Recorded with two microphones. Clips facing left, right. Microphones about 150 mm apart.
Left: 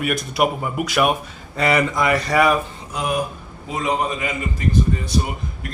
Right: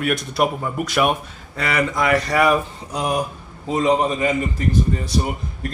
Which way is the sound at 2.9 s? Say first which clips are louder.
Right 1 dB; 35° right (ahead or behind).